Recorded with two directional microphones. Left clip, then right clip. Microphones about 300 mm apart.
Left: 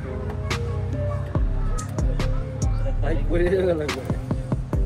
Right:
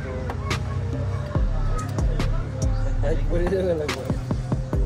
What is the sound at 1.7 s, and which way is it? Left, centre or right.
Music, centre.